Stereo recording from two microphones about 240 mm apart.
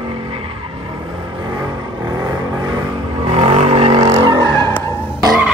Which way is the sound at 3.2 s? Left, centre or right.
Right.